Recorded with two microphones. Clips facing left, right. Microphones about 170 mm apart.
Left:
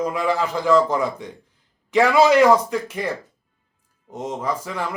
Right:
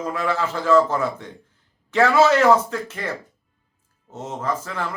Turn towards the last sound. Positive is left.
turn(degrees=10)  # may be behind; listen again after turning